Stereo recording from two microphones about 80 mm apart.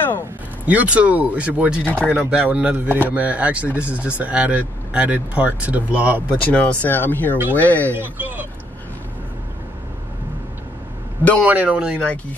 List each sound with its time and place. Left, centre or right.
0.7 s speech: centre
1.9 s speech: centre
2.1 s speech: centre
6.4 s speech: centre
7.9 s speech: right
11.4 s speech: centre